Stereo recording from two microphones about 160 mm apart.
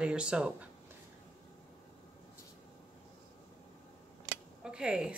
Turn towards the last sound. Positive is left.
turn(degrees=-5)  # may be behind; listen again after turning